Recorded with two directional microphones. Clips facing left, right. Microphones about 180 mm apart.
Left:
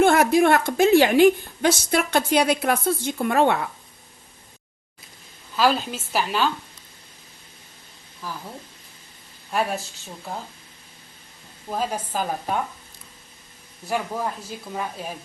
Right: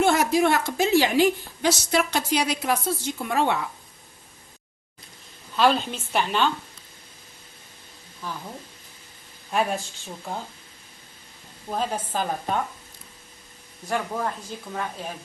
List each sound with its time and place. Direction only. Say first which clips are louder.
0.0 s a woman's voice: left 3 dB; 55° left (ahead or behind)
5.5 s a woman's voice: even; 5° left (ahead or behind)
8.2 s a woman's voice: even; 5° left (ahead or behind)
11.7 s speech: left 1 dB; 5° left (ahead or behind)
13.8 s speech: left 1 dB; 5° left (ahead or behind)